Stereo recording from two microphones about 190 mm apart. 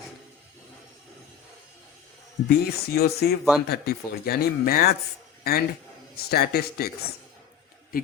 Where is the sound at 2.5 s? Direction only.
55° left (ahead or behind).